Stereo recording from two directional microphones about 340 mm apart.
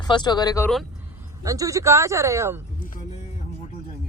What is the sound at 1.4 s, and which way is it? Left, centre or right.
Speech, centre.